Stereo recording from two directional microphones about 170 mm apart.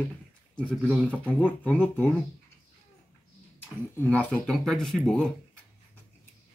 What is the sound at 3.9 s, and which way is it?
Speech, 10° left (ahead or behind).